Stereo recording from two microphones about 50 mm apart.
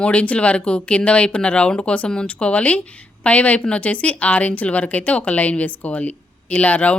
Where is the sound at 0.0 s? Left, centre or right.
Left.